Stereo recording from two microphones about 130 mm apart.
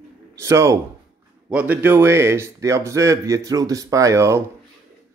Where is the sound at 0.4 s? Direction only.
20° right (ahead or behind).